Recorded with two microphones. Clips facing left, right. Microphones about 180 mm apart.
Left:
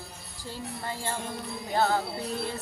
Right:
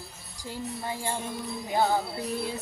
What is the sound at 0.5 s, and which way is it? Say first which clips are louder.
Speech: right 2 dB; 15° right (ahead or behind).